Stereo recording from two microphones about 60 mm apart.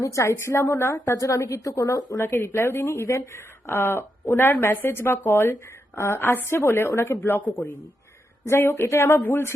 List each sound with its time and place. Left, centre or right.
0.0 s speech: left
1.1 s a woman's voice: left
2.1 s speech: left
7.2 s speech: left
8.4 s speech: left